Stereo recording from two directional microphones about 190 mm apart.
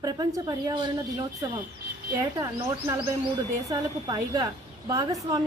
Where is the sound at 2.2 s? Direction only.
15° right (ahead or behind).